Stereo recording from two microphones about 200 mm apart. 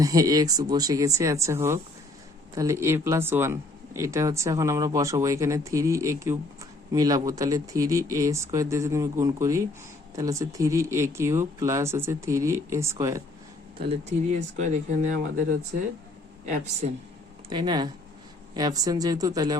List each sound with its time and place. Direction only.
0.0 s speech: 15° right (ahead or behind)
13.8 s speech: 30° right (ahead or behind)
16.8 s speech: 40° right (ahead or behind)
17.5 s speech: 20° right (ahead or behind)